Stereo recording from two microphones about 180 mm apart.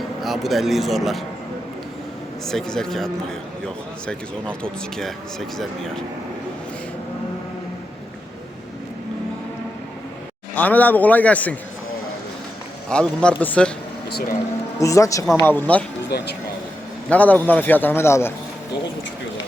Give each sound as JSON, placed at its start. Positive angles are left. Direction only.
{"t": 0.2, "sound": "speech", "side_deg": 0}
{"t": 2.5, "sound": "speech", "side_deg": 5}
{"t": 10.5, "sound": "a man's voice", "side_deg": 10}
{"t": 12.9, "sound": "speech", "side_deg": 5}
{"t": 14.8, "sound": "a man's voice", "side_deg": 15}
{"t": 16.0, "sound": "speech", "side_deg": 70}
{"t": 17.1, "sound": "a man's voice", "side_deg": 10}